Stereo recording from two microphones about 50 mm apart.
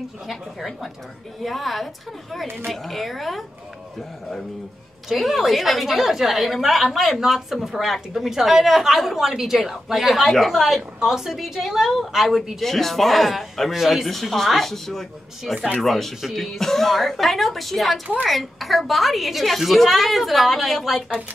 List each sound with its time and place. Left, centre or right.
0.3 s a woman's voice: centre
5.1 s a woman's voice: centre